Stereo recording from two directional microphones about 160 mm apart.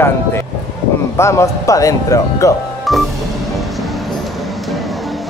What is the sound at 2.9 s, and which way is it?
Music, centre (ahead or behind).